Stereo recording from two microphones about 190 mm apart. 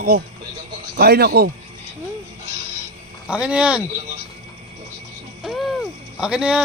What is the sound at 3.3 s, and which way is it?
Speech, 5° right (ahead or behind).